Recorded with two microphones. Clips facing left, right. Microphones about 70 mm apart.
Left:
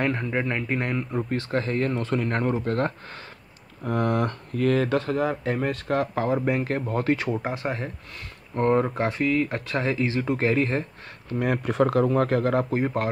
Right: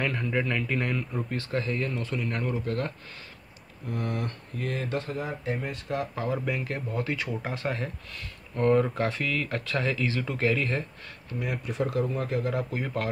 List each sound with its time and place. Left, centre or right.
0.0 s speech: left
3.8 s speech: left
6.3 s speech: left
7.2 s speech: left
11.3 s speech: left
12.5 s speech: left